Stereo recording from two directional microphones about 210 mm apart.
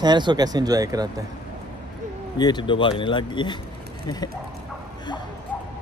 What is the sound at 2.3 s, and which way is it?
Speech, 20° left (ahead or behind).